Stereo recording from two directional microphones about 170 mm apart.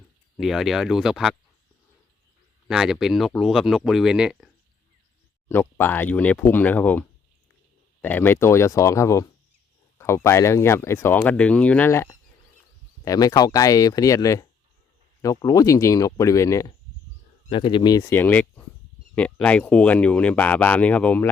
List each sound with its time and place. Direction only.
0.3 s speech: centre (ahead or behind)
2.6 s speech: centre (ahead or behind)
5.5 s speech: 15° left (ahead or behind)
13.1 s speech: 20° left (ahead or behind)
18.1 s speech: 10° left (ahead or behind)